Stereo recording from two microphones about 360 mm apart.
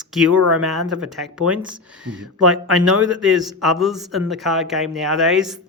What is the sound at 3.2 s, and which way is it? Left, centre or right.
Speech, centre.